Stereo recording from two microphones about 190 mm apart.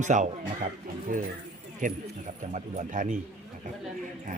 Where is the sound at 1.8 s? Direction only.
45° right (ahead or behind).